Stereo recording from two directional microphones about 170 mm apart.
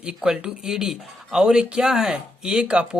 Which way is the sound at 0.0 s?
5° right (ahead or behind).